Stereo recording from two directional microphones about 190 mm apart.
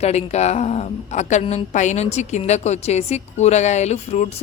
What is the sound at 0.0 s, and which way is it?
A woman's voice, 35° left (ahead or behind).